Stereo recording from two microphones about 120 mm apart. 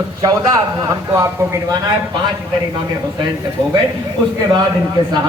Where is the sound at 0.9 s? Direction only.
25° right (ahead or behind).